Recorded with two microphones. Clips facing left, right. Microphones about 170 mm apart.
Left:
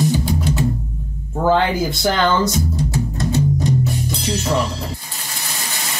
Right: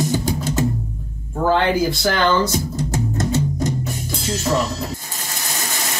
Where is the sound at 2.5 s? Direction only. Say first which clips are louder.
Left 1 dB; 45° right (ahead or behind).